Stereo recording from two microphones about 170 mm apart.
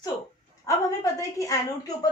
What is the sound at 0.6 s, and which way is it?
A woman's voice, 20° left (ahead or behind).